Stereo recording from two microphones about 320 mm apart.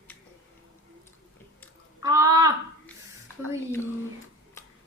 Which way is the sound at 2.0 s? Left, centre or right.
Centre.